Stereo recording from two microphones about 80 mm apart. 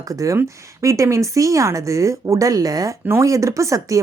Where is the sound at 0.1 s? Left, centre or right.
Right.